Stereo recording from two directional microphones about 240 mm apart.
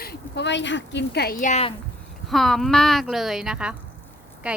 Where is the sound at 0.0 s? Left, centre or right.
Left.